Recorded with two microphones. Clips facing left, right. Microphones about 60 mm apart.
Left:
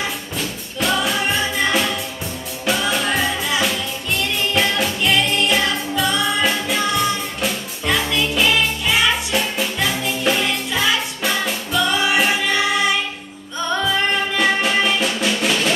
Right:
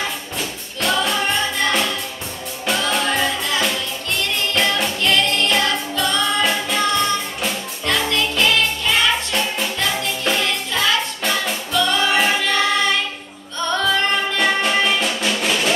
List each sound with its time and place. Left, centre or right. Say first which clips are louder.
0.4 s music: left 2 dB; centre
2.9 s music: even; centre